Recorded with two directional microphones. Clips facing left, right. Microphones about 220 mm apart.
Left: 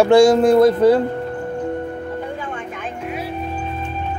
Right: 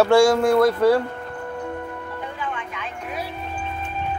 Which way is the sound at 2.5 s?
45° left (ahead or behind).